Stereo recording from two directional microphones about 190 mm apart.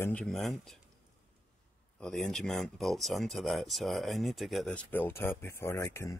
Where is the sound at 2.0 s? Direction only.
5° left (ahead or behind).